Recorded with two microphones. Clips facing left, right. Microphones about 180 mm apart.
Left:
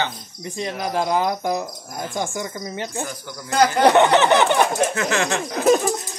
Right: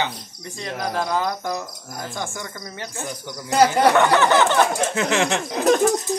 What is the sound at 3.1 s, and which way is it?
Cricket, 20° right (ahead or behind).